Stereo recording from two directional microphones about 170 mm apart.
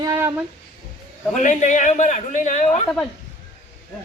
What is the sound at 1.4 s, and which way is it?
A man's voice, 50° left (ahead or behind).